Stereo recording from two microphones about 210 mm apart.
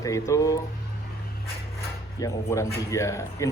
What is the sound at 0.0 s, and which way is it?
Speech, 15° left (ahead or behind).